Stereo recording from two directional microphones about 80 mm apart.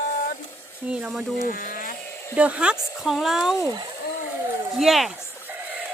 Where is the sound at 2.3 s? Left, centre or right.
Centre.